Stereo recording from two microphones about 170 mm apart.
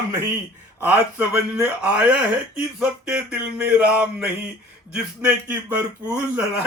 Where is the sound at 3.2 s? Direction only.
5° right (ahead or behind).